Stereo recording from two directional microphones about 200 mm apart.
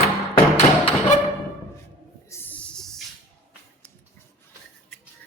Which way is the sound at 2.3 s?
10° left (ahead or behind).